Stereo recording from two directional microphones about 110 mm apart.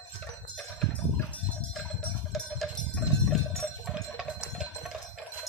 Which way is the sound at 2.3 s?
Centre (ahead or behind).